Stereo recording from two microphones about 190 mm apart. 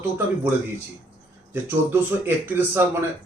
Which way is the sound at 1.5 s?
10° right (ahead or behind).